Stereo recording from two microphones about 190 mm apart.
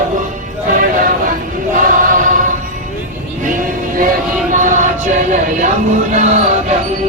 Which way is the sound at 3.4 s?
45° right (ahead or behind).